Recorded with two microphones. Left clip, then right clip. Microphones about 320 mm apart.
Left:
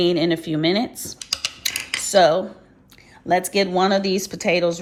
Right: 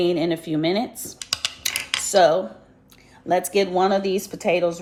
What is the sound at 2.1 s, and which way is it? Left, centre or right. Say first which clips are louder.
A woman's voice: left 1 dB; left.